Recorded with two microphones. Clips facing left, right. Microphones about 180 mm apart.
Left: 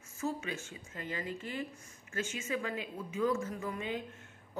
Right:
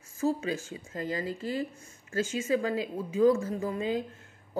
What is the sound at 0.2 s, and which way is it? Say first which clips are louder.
Speech: right 8 dB; 35° right (ahead or behind).